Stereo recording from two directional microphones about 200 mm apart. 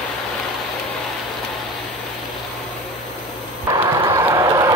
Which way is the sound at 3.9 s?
20° right (ahead or behind).